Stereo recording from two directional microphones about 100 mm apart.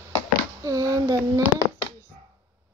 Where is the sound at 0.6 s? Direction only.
35° right (ahead or behind).